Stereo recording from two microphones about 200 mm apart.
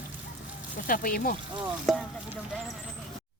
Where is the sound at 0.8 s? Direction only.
45° left (ahead or behind).